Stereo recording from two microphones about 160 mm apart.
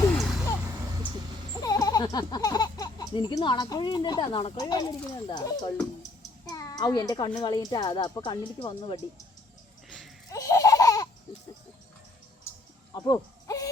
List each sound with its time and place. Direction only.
0.1 s vehicle: centre (ahead or behind)
1.6 s a child's voice: 25° left (ahead or behind)
10.2 s laughter: 20° left (ahead or behind)
12.5 s a sound: 20° left (ahead or behind)
13.1 s owl: 20° left (ahead or behind)